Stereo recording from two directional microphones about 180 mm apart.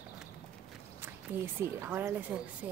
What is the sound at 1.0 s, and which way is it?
Speech, 10° right (ahead or behind).